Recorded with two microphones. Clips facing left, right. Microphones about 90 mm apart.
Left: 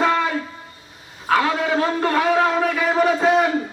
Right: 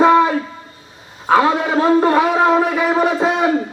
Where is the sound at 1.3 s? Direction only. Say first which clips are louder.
Right 5 dB; 25° right (ahead or behind).